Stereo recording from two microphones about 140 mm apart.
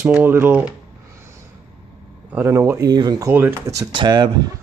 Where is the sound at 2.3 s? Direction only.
15° right (ahead or behind).